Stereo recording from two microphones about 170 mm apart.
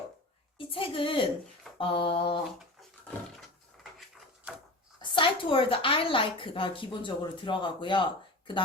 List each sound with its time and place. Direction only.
0.7 s a woman's voice: 30° left (ahead or behind)
4.9 s a woman's voice: 30° left (ahead or behind)